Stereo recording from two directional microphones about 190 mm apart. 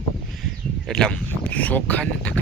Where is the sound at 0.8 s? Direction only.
5° left (ahead or behind).